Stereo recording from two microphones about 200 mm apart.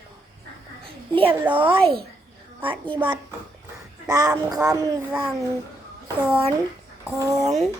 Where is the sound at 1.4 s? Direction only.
10° right (ahead or behind).